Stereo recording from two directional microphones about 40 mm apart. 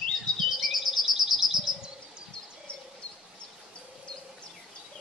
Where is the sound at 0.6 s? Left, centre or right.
Centre.